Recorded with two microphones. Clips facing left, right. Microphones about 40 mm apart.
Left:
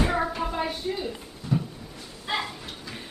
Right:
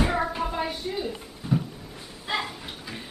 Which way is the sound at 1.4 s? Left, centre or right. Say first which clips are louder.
Right 1 dB; centre.